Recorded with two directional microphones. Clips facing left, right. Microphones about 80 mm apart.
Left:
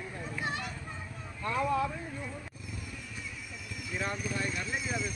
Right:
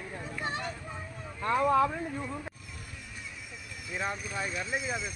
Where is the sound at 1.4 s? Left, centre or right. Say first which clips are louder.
Right 5 dB; right.